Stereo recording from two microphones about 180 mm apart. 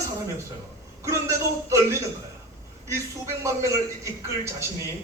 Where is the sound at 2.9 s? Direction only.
15° right (ahead or behind).